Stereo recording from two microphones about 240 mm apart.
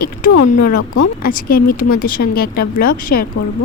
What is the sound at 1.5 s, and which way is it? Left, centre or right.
Speech, left.